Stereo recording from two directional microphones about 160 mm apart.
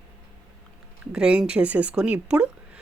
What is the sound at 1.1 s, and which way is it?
Speech, 5° right (ahead or behind).